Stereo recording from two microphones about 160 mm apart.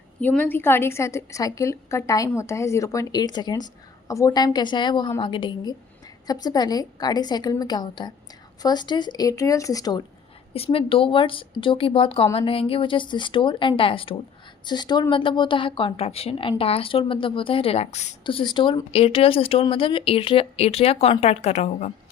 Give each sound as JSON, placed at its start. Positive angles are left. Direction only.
{"t": 0.2, "sound": "a woman's voice", "side_deg": 10}
{"t": 10.5, "sound": "a woman's voice", "side_deg": 35}
{"t": 18.2, "sound": "speech", "side_deg": 30}